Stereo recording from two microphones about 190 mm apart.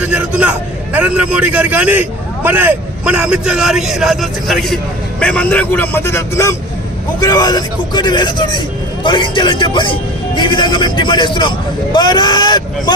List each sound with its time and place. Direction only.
0.0 s a man's voice: 5° right (ahead or behind); by 12.9 s 20° left (ahead or behind)